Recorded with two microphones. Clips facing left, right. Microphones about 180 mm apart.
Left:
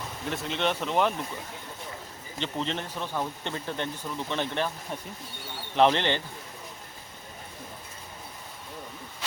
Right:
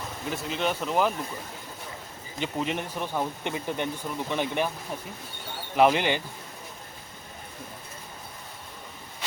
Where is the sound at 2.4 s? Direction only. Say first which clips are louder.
Right 2 dB; 10° right (ahead or behind).